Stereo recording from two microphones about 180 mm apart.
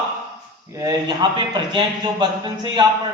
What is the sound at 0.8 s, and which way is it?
A man's voice, 20° right (ahead or behind).